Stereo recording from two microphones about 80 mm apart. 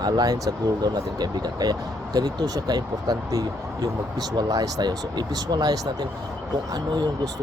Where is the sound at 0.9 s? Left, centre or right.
Right.